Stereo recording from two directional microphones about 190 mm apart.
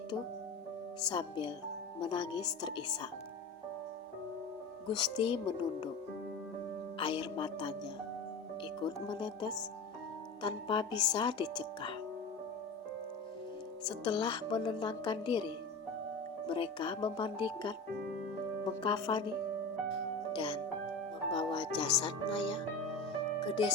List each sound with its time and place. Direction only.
1.0 s speech: 25° left (ahead or behind)
4.9 s speech: 25° left (ahead or behind)
7.0 s speech: 25° left (ahead or behind)
9.0 s speech: 25° left (ahead or behind)
13.8 s speech: 25° left (ahead or behind)
18.8 s speech: 25° left (ahead or behind)
20.3 s music: 25° left (ahead or behind)
21.3 s speech: 25° left (ahead or behind)
23.0 s music: 25° left (ahead or behind)